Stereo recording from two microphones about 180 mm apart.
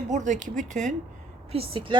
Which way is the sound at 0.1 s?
40° right (ahead or behind).